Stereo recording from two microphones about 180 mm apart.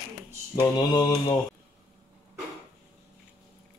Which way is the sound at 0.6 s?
20° left (ahead or behind).